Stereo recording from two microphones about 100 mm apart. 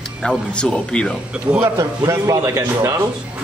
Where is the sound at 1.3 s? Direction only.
10° right (ahead or behind).